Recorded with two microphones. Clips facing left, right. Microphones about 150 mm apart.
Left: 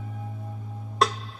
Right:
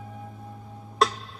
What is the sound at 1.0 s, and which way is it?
Music, centre (ahead or behind).